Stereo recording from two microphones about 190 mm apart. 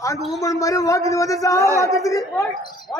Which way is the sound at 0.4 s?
15° left (ahead or behind).